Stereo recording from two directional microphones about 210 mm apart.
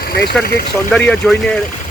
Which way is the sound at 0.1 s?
50° left (ahead or behind).